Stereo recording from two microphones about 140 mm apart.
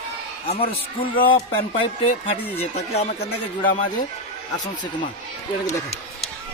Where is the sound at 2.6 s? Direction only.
50° left (ahead or behind).